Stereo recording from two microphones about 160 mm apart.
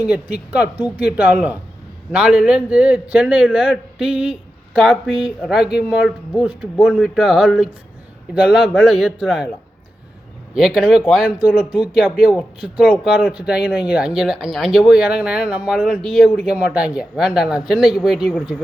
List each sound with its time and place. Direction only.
0.0 s a man's voice: 10° right (ahead or behind)
10.5 s a man's voice: 5° right (ahead or behind)
16.5 s a man's voice: 10° right (ahead or behind)